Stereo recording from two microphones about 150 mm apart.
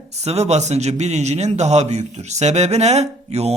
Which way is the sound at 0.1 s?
45° right (ahead or behind).